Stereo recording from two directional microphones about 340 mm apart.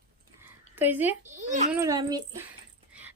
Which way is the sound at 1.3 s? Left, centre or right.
Right.